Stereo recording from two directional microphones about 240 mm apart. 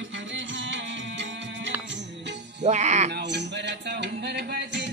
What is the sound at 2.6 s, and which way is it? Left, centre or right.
Speech, right.